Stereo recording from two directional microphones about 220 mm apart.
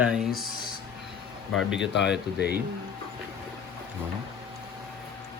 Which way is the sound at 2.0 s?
50° left (ahead or behind).